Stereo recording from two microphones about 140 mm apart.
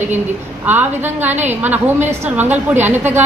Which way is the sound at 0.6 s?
15° right (ahead or behind).